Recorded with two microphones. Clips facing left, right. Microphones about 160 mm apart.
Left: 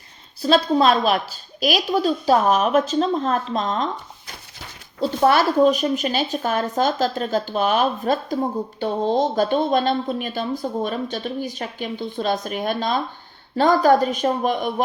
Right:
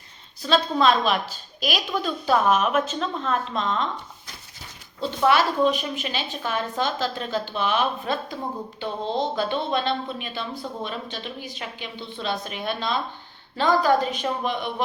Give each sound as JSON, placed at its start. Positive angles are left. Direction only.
{"t": 0.4, "sound": "a woman's voice", "side_deg": 40}
{"t": 4.9, "sound": "speech", "side_deg": 40}